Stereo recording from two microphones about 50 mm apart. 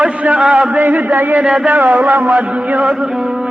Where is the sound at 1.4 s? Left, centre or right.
Centre.